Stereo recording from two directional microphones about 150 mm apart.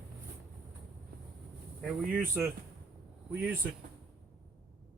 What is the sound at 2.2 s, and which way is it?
Speech, 15° right (ahead or behind).